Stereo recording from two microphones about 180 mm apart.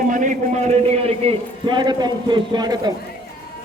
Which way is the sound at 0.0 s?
45° right (ahead or behind).